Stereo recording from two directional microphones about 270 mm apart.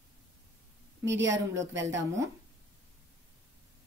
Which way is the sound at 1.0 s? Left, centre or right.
Right.